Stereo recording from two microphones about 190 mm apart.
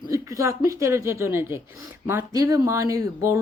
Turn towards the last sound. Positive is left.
turn(degrees=-15)  # may be behind; listen again after turning